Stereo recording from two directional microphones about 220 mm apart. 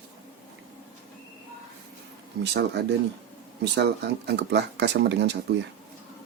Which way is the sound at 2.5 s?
50° right (ahead or behind).